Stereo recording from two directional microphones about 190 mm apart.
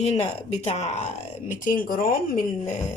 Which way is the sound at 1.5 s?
45° left (ahead or behind).